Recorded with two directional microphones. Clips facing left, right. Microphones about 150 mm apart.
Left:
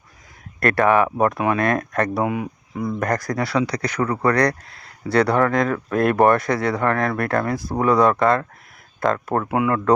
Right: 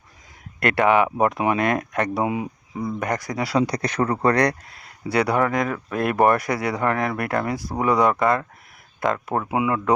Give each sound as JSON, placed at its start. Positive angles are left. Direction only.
{"t": 0.6, "sound": "speech", "side_deg": -20}